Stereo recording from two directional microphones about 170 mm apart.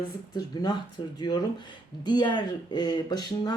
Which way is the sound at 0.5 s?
25° left (ahead or behind).